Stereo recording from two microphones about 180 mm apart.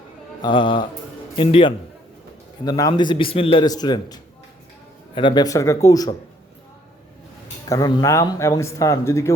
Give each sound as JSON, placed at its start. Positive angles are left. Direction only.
{"t": 0.4, "sound": "a man's voice", "side_deg": 25}
{"t": 7.7, "sound": "speech", "side_deg": 20}